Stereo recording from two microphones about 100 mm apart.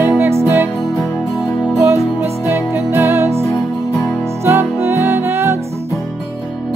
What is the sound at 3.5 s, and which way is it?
Music, 40° left (ahead or behind).